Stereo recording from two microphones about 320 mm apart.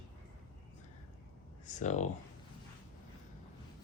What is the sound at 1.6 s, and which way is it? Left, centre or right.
Speech, left.